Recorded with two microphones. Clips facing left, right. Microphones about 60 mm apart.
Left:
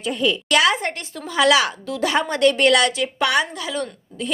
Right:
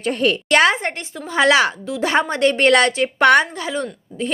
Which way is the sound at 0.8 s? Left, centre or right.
Right.